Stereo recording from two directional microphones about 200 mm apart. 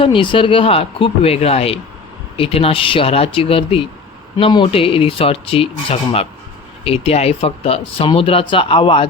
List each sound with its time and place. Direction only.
0.0 s speech: 25° left (ahead or behind)